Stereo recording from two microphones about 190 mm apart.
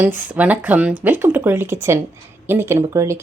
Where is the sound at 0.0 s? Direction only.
10° right (ahead or behind).